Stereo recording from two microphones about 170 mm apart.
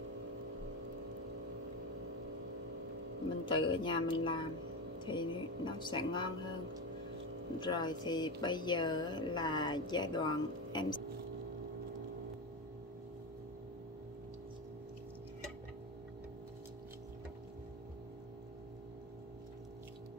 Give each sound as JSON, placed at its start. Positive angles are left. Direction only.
{"t": 3.4, "sound": "speech", "side_deg": 30}
{"t": 7.6, "sound": "speech", "side_deg": 25}